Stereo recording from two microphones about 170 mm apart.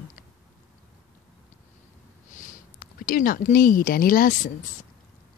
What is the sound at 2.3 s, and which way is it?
A woman's voice, 50° left (ahead or behind).